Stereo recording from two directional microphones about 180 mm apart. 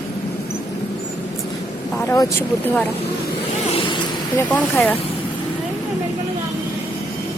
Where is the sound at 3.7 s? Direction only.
30° left (ahead or behind).